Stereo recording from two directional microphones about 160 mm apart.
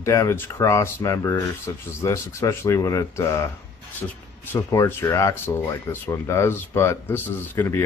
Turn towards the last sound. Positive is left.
turn(degrees=15)  # may be behind; listen again after turning